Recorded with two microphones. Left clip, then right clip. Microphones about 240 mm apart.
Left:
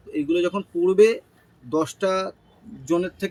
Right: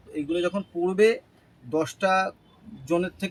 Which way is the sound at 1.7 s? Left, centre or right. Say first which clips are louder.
Left 1 dB; right.